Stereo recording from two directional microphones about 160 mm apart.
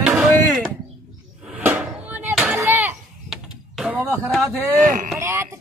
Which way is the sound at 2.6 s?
10° right (ahead or behind).